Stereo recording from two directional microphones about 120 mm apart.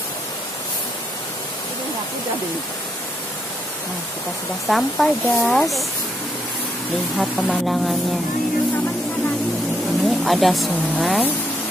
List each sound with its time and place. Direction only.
4.6 s speech: centre (ahead or behind)
7.2 s speech: centre (ahead or behind)
10.0 s speech: centre (ahead or behind)